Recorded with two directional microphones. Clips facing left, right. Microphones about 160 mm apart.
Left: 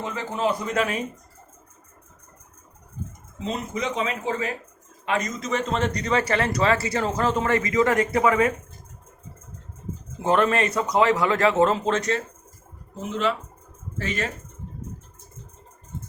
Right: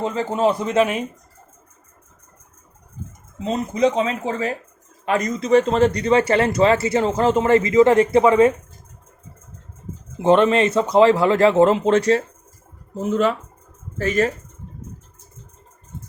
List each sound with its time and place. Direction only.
0.0 s a man's voice: 25° right (ahead or behind)
3.4 s a man's voice: 35° right (ahead or behind)
10.2 s a man's voice: 25° right (ahead or behind)
13.0 s speech: 45° right (ahead or behind)